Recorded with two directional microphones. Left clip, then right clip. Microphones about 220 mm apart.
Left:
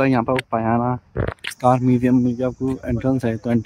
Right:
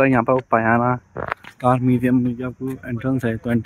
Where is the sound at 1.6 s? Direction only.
15° left (ahead or behind).